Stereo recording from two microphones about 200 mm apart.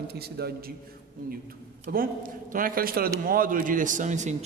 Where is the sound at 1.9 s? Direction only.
50° right (ahead or behind).